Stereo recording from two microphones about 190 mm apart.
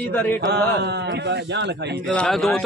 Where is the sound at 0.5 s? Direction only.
60° right (ahead or behind).